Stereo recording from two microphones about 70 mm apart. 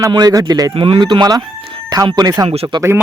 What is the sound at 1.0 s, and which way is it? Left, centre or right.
Speech, right.